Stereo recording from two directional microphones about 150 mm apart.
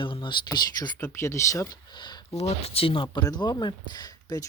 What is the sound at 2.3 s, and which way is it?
Speech, 45° left (ahead or behind).